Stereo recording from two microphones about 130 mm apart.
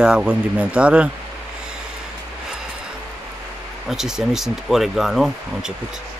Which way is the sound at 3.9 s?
5° right (ahead or behind).